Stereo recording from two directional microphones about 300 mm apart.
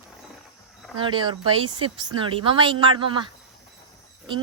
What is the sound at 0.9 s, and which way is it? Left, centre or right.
Speech, centre.